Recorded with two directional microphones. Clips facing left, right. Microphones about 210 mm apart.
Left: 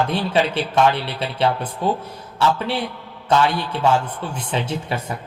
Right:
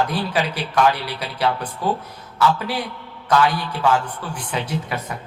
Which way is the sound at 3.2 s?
25° left (ahead or behind).